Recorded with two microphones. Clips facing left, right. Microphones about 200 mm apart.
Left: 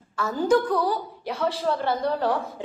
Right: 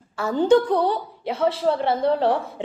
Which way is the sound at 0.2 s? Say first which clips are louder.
Right 4 dB; 30° right (ahead or behind).